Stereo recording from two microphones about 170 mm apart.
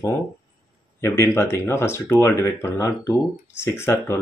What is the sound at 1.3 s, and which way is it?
Speech, 15° left (ahead or behind).